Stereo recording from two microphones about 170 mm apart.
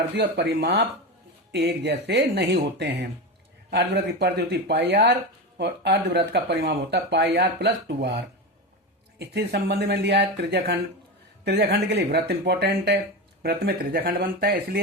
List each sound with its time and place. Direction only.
0.2 s speech: 80° right
13.4 s speech: 65° right (ahead or behind)